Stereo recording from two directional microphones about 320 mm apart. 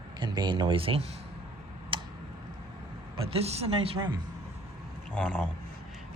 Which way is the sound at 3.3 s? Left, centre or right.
Centre.